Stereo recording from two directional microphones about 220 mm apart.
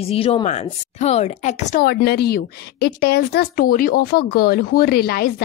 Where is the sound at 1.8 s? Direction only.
45° left (ahead or behind).